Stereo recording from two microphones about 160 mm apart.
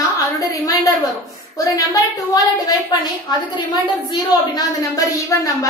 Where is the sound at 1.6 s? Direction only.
20° left (ahead or behind).